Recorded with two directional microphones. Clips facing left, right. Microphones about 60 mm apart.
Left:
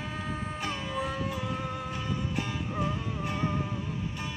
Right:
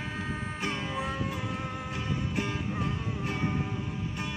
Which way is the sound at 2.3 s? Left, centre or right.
Right.